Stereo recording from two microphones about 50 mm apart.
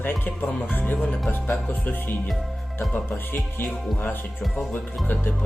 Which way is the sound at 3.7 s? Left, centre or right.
Left.